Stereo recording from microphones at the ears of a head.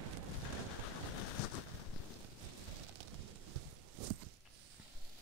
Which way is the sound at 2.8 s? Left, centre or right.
Right.